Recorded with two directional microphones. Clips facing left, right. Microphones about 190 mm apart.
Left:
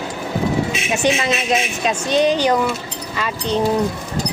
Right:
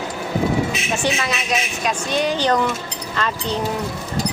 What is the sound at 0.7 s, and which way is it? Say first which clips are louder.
Vehicle: left 3 dB; 25° left (ahead or behind).